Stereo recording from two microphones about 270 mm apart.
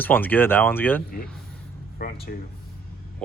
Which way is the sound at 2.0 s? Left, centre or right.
Left.